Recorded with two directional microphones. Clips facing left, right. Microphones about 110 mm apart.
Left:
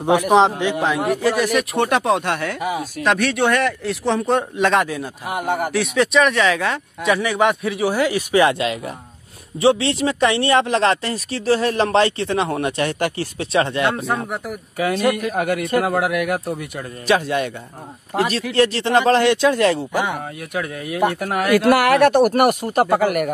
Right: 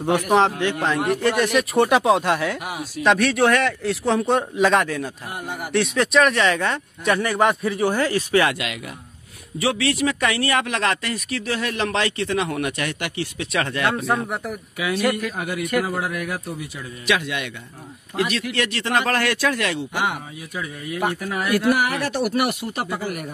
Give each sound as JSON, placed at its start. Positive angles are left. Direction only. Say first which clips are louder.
{"t": 0.3, "sound": "a man's voice", "louder": "left 2 dB", "side_deg": 20}
{"t": 5.2, "sound": "speech", "louder": "left 9 dB", "side_deg": 75}
{"t": 5.7, "sound": "a man's voice", "louder": "left 2 dB", "side_deg": 0}
{"t": 8.5, "sound": "speech", "louder": "left 7 dB", "side_deg": 30}
{"t": 13.9, "sound": "a man's voice", "louder": "even", "side_deg": 0}
{"t": 15.3, "sound": "a man's voice", "louder": "left 4 dB", "side_deg": 55}
{"t": 17.0, "sound": "speech", "louder": "left 5 dB", "side_deg": 35}
{"t": 20.2, "sound": "speech", "louder": "left 6 dB", "side_deg": 60}
{"t": 22.1, "sound": "speech", "louder": "left 7 dB", "side_deg": 50}
{"t": 22.8, "sound": "speech", "louder": "left 10 dB", "side_deg": 65}